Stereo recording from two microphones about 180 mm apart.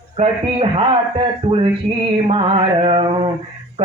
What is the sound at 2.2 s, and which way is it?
Male singing, 30° right (ahead or behind).